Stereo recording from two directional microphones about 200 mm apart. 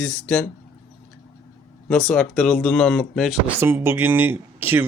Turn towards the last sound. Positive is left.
turn(degrees=-10)  # may be behind; listen again after turning